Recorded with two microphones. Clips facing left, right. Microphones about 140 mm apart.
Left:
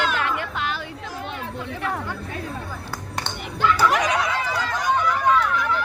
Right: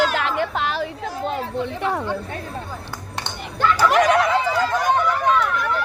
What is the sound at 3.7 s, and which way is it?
Chatter, 50° right (ahead or behind).